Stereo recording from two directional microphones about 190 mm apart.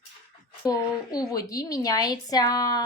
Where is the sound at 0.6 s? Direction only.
20° left (ahead or behind).